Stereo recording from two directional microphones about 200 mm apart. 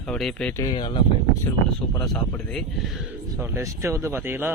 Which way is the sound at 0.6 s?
25° left (ahead or behind).